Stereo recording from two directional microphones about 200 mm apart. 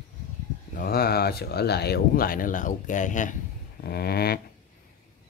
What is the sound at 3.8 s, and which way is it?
Speech, 50° left (ahead or behind).